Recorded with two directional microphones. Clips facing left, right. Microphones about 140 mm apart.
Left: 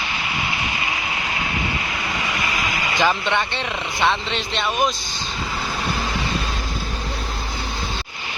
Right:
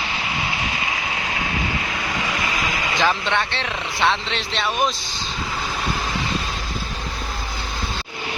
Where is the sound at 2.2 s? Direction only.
Centre (ahead or behind).